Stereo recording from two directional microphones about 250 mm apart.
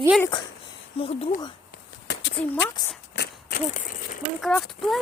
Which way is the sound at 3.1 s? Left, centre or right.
Left.